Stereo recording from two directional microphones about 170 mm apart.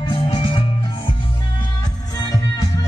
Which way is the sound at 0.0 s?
30° left (ahead or behind).